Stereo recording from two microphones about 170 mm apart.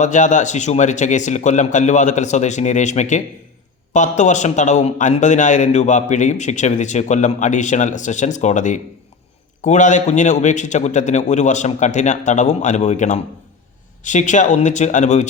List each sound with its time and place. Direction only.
0.0 s a man's voice: 45° left (ahead or behind)